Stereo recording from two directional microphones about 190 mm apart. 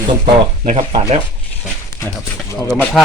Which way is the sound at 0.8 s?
20° right (ahead or behind).